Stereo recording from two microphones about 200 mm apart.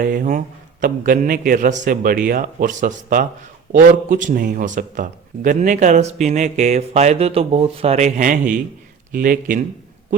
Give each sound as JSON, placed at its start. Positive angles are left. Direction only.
{"t": 0.0, "sound": "a man's voice", "side_deg": -40}